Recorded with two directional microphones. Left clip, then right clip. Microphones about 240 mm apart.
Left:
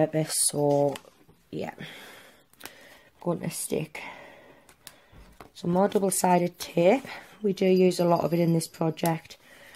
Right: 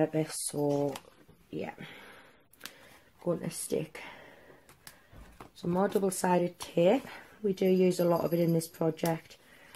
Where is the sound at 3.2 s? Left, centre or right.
Left.